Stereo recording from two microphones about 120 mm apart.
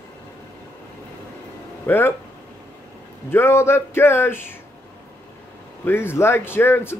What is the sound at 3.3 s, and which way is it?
A man's voice, 20° left (ahead or behind).